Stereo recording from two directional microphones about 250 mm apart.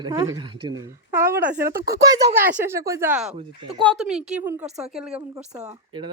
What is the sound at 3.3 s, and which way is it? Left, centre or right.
Speech, right.